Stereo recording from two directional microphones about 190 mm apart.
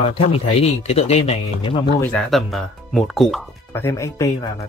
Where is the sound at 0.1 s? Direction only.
30° left (ahead or behind).